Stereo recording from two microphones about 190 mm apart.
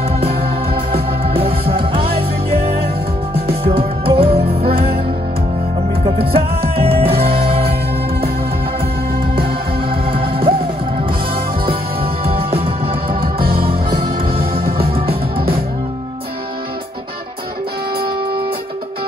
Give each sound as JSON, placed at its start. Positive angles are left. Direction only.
{"t": 0.4, "sound": "organ", "side_deg": -30}
{"t": 3.3, "sound": "music", "side_deg": -55}
{"t": 3.7, "sound": "music", "side_deg": -30}
{"t": 6.3, "sound": "music", "side_deg": -30}
{"t": 9.8, "sound": "music", "side_deg": -30}
{"t": 11.6, "sound": "music", "side_deg": -30}
{"t": 14.4, "sound": "music", "side_deg": -55}
{"t": 14.9, "sound": "music", "side_deg": -30}